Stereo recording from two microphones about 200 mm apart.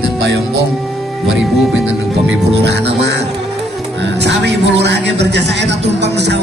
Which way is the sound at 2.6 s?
55° right (ahead or behind).